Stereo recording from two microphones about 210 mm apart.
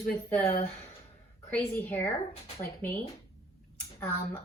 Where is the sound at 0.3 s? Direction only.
10° left (ahead or behind).